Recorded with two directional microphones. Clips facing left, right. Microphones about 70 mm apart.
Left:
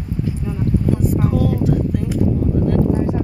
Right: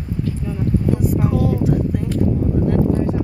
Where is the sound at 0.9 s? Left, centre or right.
Centre.